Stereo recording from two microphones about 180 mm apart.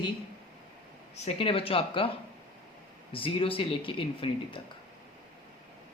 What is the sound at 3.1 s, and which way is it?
Speech, 30° left (ahead or behind).